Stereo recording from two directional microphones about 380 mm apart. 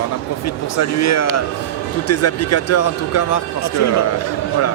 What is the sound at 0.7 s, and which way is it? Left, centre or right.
Speech, left.